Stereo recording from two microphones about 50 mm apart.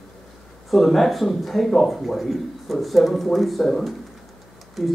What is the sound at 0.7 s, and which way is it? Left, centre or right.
Speech, centre.